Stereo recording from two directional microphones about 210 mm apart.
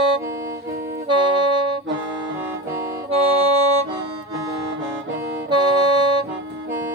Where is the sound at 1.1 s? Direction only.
20° right (ahead or behind).